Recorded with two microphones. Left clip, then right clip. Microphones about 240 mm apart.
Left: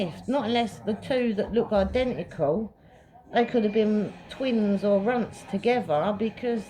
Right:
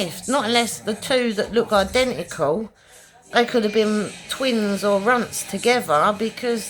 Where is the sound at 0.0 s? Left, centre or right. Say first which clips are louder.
Right 6 dB; right.